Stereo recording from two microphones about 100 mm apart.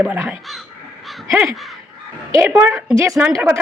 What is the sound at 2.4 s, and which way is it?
Speech, 20° right (ahead or behind).